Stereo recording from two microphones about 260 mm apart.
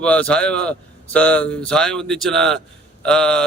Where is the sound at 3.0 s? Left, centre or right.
Centre.